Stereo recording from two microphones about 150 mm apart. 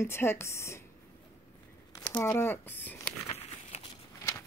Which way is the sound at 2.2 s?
15° left (ahead or behind).